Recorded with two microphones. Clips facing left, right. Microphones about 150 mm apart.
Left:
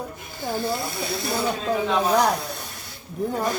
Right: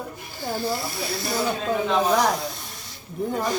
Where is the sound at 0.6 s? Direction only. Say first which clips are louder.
Left 1 dB; 55° left (ahead or behind).